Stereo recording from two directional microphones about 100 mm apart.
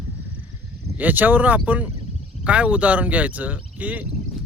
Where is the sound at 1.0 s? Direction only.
15° right (ahead or behind).